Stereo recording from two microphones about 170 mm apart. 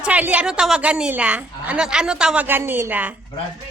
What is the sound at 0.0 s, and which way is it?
A woman's voice, 10° right (ahead or behind).